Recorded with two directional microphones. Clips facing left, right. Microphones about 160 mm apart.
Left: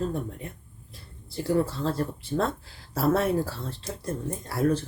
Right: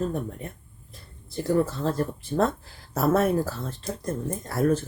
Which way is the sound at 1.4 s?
45° right (ahead or behind).